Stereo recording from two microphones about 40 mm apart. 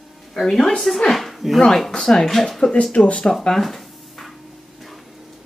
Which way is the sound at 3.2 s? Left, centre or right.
Centre.